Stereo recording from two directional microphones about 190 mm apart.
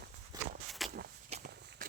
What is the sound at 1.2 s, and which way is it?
Walk, 35° right (ahead or behind).